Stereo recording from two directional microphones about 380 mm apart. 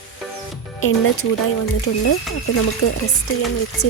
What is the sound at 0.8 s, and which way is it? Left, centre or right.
Speech, left.